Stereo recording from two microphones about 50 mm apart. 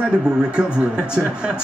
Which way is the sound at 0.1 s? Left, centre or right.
Centre.